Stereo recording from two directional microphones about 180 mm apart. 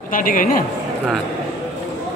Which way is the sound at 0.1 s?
50° left (ahead or behind).